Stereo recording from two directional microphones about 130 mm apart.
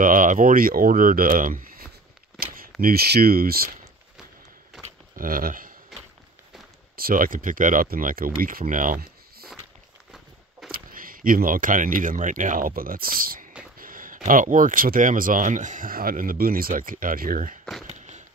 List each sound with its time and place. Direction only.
0.0 s speech: 90° right
2.7 s speech: centre (ahead or behind)
5.1 s speech: 90° right
7.0 s speech: 90° right
10.9 s speech: 90° right
17.8 s a sound: 65° right (ahead or behind)